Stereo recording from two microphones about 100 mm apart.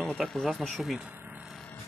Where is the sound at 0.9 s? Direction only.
15° right (ahead or behind).